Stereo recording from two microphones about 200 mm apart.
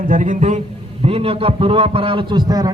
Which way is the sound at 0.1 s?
40° right (ahead or behind).